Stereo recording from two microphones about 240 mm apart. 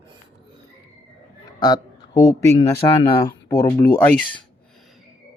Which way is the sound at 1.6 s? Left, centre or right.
Centre.